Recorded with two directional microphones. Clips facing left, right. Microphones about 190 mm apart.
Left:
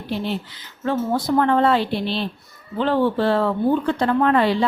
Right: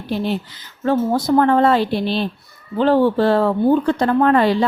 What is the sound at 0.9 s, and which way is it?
A woman's voice, 40° right (ahead or behind).